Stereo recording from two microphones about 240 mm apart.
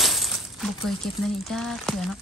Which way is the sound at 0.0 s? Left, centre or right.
Centre.